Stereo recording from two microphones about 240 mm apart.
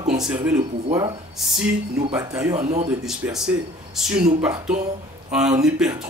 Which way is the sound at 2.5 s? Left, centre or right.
Right.